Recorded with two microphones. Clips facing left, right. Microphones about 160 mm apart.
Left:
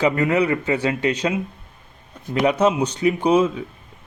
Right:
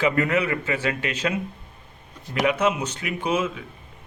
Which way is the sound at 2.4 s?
40° left (ahead or behind).